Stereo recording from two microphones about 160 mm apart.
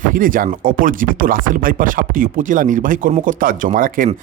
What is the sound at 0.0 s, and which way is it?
Speech, 60° right (ahead or behind).